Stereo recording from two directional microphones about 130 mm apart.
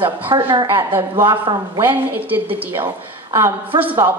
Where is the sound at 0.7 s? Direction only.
15° right (ahead or behind).